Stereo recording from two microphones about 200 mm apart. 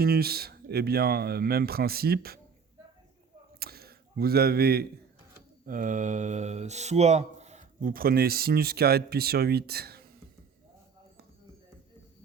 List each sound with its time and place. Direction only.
0.0 s speech: 50° right (ahead or behind)
3.6 s speech: 50° right (ahead or behind)